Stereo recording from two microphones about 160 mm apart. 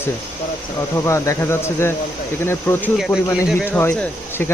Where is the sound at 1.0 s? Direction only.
20° left (ahead or behind).